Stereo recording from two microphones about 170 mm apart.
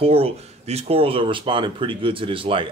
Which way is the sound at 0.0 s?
35° right (ahead or behind).